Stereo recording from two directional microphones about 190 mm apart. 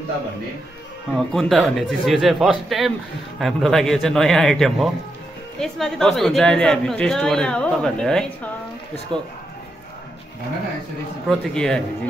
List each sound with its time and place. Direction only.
1.1 s a woman's voice: centre (ahead or behind)
9.1 s speech: 25° right (ahead or behind)
11.2 s a woman's voice: centre (ahead or behind)